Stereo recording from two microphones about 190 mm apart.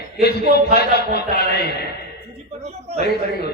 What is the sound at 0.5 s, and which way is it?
A man's voice, 55° left (ahead or behind).